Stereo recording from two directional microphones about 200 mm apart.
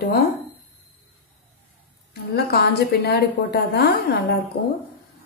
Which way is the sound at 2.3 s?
55° left (ahead or behind).